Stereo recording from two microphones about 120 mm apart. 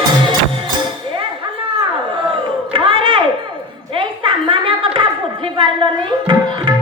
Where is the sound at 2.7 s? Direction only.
50° right (ahead or behind).